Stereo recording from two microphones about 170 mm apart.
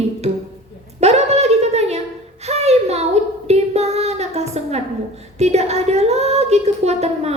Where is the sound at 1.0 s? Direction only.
40° right (ahead or behind).